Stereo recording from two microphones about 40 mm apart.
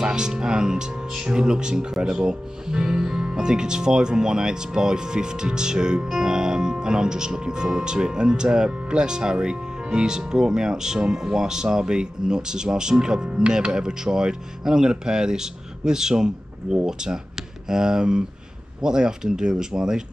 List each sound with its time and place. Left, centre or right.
0.0 s speech: centre